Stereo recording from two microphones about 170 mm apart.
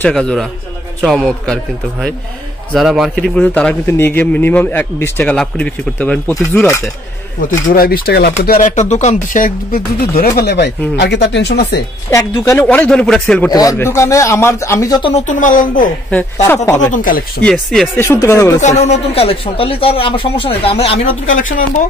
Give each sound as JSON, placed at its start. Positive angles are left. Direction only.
{"t": 0.0, "sound": "a man's voice", "side_deg": 5}
{"t": 7.7, "sound": "speech", "side_deg": 60}
{"t": 11.0, "sound": "speech", "side_deg": 90}
{"t": 12.1, "sound": "a man's voice", "side_deg": 20}
{"t": 12.6, "sound": "a man's voice", "side_deg": 5}
{"t": 13.5, "sound": "a man's voice", "side_deg": 20}
{"t": 15.1, "sound": "speech", "side_deg": 45}
{"t": 16.4, "sound": "a man's voice", "side_deg": 15}
{"t": 16.9, "sound": "speech", "side_deg": 55}
{"t": 17.4, "sound": "a man's voice", "side_deg": 5}
{"t": 18.0, "sound": "a man's voice", "side_deg": 15}
{"t": 18.6, "sound": "speech", "side_deg": 40}
{"t": 21.4, "sound": "speech", "side_deg": 50}